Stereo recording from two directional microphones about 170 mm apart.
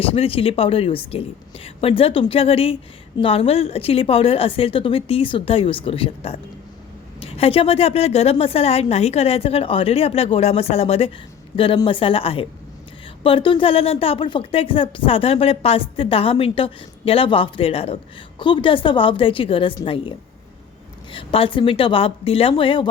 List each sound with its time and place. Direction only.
0.0 s a woman's voice: 35° left (ahead or behind)